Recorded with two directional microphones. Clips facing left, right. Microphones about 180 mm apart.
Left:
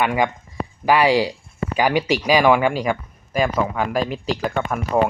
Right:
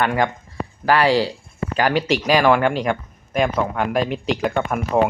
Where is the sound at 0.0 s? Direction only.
10° left (ahead or behind).